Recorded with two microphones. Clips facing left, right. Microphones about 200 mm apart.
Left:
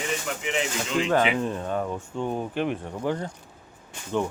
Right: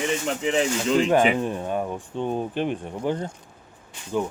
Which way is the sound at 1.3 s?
15° right (ahead or behind).